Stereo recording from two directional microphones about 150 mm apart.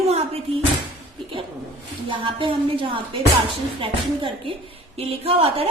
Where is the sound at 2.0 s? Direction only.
35° right (ahead or behind).